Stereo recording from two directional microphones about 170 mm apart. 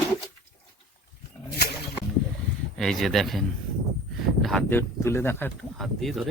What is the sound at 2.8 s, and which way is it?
Speech, centre (ahead or behind).